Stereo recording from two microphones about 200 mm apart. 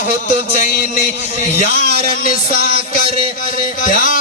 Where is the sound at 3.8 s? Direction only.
40° left (ahead or behind).